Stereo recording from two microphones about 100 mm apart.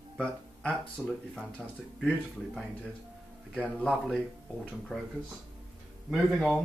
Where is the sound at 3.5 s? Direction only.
10° left (ahead or behind).